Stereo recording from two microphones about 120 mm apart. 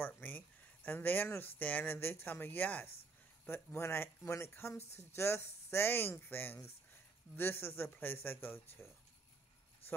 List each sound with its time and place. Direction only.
0.0 s speech: 15° left (ahead or behind)